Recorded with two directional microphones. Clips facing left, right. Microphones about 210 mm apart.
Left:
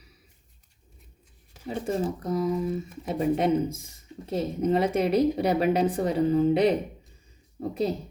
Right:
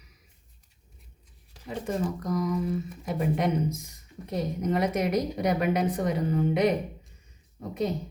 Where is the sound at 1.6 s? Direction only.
30° left (ahead or behind).